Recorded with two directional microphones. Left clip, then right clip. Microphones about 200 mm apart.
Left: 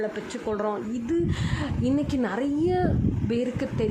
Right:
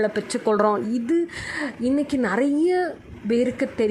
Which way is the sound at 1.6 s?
5° right (ahead or behind).